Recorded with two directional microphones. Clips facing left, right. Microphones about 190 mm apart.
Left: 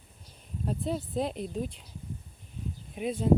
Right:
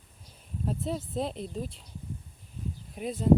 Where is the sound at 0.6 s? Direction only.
Centre (ahead or behind).